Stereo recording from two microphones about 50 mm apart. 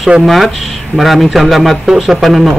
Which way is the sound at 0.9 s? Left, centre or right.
Centre.